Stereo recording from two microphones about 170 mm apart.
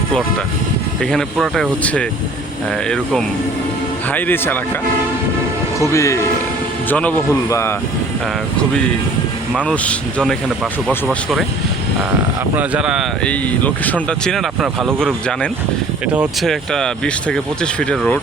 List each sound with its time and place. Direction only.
1.1 s speech: centre (ahead or behind)
5.8 s speech: 20° left (ahead or behind)
9.6 s speech: 5° left (ahead or behind)
12.5 s speech: 5° right (ahead or behind)
13.2 s speech: 10° left (ahead or behind)